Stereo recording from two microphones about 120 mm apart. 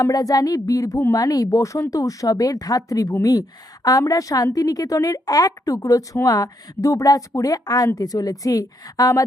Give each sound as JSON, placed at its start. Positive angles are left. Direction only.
{"t": 0.0, "sound": "a woman's voice", "side_deg": 30}